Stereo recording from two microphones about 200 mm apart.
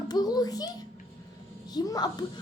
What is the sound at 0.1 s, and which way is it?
A child's voice, 20° left (ahead or behind).